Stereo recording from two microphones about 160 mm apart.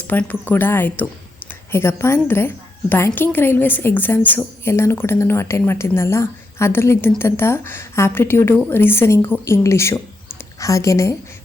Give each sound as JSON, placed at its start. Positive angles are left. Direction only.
{"t": 0.1, "sound": "a woman's voice", "side_deg": 10}